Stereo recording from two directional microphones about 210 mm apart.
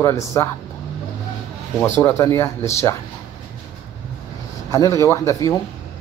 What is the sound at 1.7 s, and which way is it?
A man's voice, 10° left (ahead or behind).